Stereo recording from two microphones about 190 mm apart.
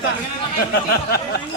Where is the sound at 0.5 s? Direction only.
55° left (ahead or behind).